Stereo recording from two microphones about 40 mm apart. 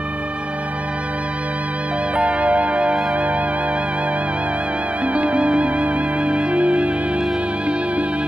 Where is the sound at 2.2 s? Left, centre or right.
Right.